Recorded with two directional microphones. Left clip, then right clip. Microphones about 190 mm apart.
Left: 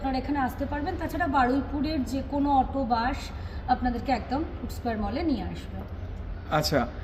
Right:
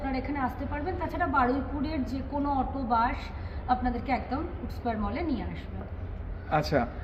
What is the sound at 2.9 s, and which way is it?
A woman's voice, 5° left (ahead or behind).